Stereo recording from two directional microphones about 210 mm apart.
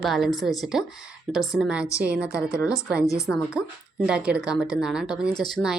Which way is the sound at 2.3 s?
15° left (ahead or behind).